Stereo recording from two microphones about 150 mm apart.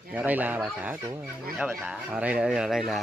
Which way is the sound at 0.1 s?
10° right (ahead or behind).